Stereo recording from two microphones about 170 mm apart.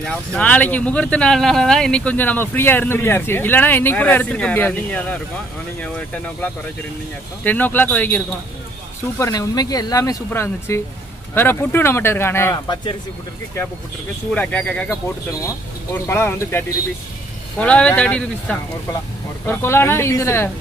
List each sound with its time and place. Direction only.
0.0 s speech: 5° left (ahead or behind)
9.2 s speech: 20° left (ahead or behind)
14.3 s speech: 10° left (ahead or behind)